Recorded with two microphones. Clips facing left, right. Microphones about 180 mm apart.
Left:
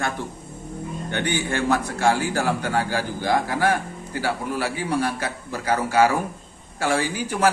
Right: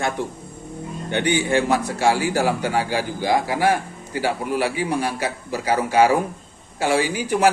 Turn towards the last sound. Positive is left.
turn(degrees=-15)  # may be behind; listen again after turning